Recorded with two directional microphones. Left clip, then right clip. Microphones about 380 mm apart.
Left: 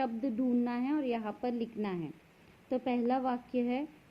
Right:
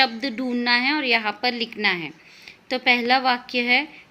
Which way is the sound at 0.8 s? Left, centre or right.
Centre.